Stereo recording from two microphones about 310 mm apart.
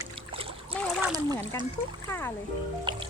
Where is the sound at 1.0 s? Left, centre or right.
Centre.